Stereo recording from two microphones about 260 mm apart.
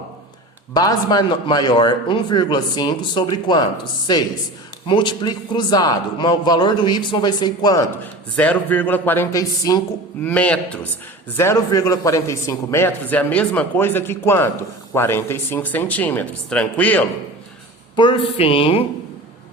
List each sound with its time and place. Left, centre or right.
0.7 s a man's voice: centre
17.9 s a woman's voice: centre